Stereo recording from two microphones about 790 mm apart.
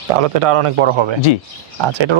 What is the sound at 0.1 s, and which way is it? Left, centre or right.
Speech, right.